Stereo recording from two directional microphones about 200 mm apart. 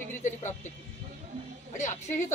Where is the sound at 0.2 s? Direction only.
35° left (ahead or behind).